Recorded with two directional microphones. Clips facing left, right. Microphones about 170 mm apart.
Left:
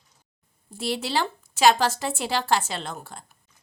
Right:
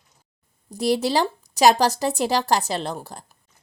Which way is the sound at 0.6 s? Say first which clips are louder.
Right 8 dB; 40° right (ahead or behind).